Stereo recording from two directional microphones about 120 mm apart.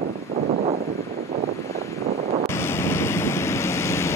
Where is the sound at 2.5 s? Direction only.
20° left (ahead or behind).